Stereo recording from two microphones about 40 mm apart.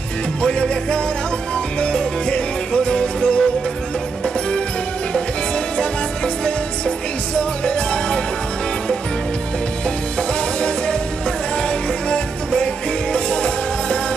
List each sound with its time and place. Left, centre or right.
0.4 s music: left
5.8 s music: left
12.1 s music: left